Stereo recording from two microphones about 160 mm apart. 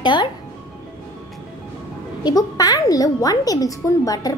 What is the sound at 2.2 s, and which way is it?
A woman's voice, 25° left (ahead or behind).